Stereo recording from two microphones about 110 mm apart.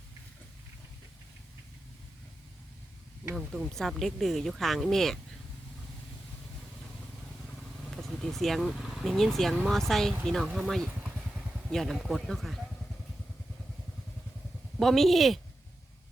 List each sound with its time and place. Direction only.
3.3 s speech: centre (ahead or behind)
7.9 s speech: centre (ahead or behind)
14.8 s speech: centre (ahead or behind)